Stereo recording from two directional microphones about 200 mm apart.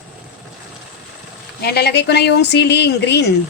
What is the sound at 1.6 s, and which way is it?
Speech, 55° left (ahead or behind).